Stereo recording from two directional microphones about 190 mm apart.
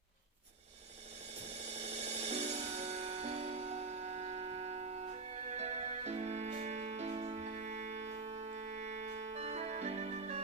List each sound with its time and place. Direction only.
1.5 s music: 35° right (ahead or behind)